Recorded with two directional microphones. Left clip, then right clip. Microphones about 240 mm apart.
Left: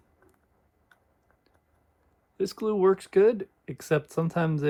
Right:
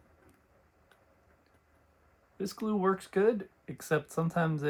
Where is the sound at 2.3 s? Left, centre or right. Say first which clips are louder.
Left 8 dB; left.